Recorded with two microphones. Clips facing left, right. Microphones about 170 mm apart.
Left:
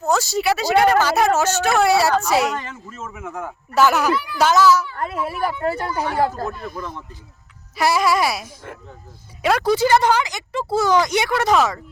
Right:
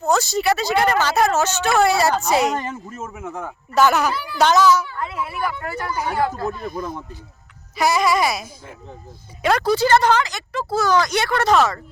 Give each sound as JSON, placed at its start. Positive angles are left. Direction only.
{"t": 0.0, "sound": "speech", "side_deg": 10}
{"t": 2.0, "sound": "a woman's voice", "side_deg": -45}
{"t": 3.8, "sound": "speech", "side_deg": 5}
{"t": 4.1, "sound": "a child's voice", "side_deg": -30}
{"t": 4.4, "sound": "speech", "side_deg": 5}
{"t": 4.9, "sound": "speech", "side_deg": 45}
{"t": 7.8, "sound": "speech", "side_deg": 5}
{"t": 9.7, "sound": "speech", "side_deg": 15}